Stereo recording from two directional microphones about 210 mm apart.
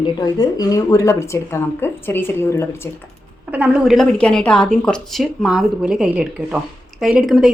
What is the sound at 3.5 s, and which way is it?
A woman's voice, 5° right (ahead or behind).